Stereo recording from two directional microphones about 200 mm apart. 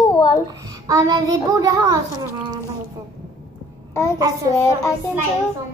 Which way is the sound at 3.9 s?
15° left (ahead or behind).